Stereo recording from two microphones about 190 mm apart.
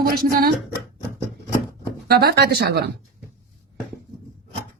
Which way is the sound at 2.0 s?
55° right (ahead or behind).